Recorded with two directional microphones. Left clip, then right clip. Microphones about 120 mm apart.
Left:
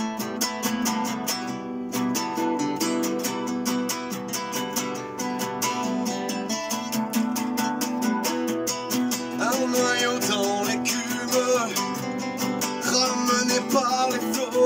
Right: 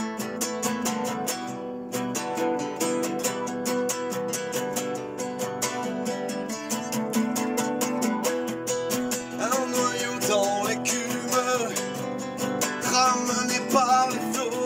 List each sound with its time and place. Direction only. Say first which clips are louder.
9.7 s music: left 4 dB; 25° right (ahead or behind)
12.9 s music: right 1 dB; 25° right (ahead or behind)